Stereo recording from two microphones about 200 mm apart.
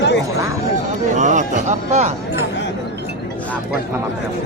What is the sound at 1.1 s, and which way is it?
Speech, 40° right (ahead or behind).